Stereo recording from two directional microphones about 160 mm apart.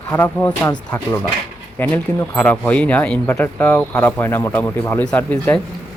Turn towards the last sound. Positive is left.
turn(degrees=10)  # may be behind; listen again after turning